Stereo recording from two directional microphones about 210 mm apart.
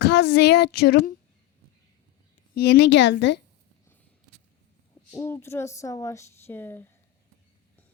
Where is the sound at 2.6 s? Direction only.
55° left (ahead or behind).